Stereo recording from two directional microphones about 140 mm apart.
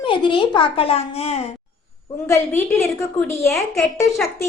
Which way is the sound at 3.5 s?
Centre (ahead or behind).